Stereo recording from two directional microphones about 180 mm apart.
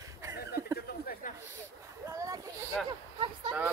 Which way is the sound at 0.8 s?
55° left (ahead or behind).